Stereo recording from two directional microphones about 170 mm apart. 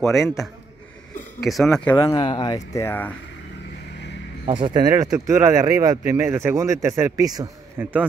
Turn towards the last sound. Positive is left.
turn(degrees=-20)  # may be behind; listen again after turning